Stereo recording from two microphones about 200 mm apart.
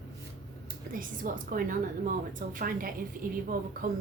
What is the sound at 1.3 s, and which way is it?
A woman's voice, 45° right (ahead or behind).